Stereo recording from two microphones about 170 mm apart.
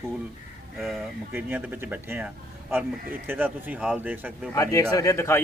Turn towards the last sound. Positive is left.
turn(degrees=15)  # may be behind; listen again after turning